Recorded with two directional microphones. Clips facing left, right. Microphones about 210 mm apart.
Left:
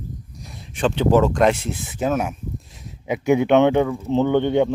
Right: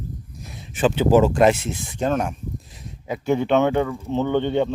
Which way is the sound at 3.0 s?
15° left (ahead or behind).